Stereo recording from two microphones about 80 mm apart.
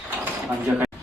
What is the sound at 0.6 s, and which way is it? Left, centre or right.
Speech, centre.